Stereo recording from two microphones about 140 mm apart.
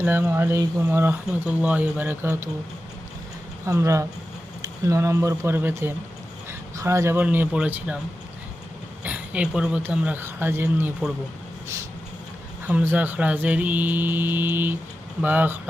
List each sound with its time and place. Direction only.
0.0 s speech: 15° right (ahead or behind)
3.7 s speech: 20° right (ahead or behind)
9.0 s speech: 10° right (ahead or behind)
12.6 s speech: 10° right (ahead or behind)